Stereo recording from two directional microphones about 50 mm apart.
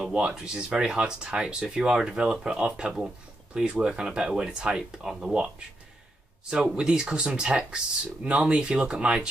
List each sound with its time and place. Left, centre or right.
0.1 s speech: centre
6.5 s speech: centre